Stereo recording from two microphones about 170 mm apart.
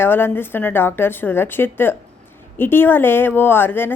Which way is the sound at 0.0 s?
15° left (ahead or behind).